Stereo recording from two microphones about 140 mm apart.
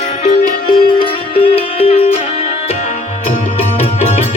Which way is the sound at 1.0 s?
45° left (ahead or behind).